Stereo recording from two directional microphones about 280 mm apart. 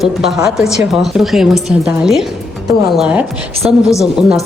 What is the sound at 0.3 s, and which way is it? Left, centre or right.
Speech, centre.